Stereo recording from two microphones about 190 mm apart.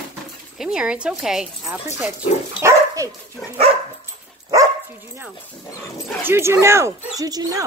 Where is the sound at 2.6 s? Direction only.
15° right (ahead or behind).